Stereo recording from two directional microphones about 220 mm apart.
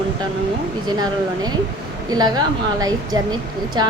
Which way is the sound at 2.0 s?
15° right (ahead or behind).